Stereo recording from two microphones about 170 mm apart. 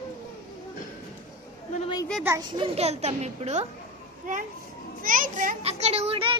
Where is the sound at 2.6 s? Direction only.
40° right (ahead or behind).